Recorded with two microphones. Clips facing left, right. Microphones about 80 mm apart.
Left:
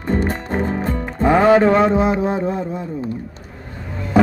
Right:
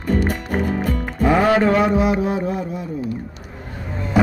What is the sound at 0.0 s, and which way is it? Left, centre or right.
Music, left.